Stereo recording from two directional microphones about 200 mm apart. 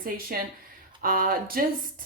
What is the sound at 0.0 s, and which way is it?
A woman's voice, 45° right (ahead or behind).